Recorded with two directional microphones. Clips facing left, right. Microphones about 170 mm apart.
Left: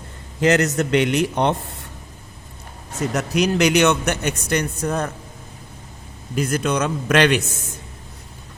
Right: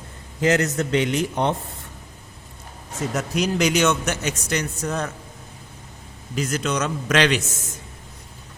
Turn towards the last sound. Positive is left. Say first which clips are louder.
# left 3 dB
turn(degrees=60)  # may be behind; listen again after turning